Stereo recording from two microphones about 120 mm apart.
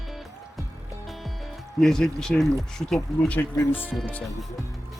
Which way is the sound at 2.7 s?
5° left (ahead or behind).